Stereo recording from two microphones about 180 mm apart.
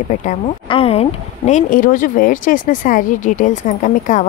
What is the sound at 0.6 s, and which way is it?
Speech, 30° left (ahead or behind).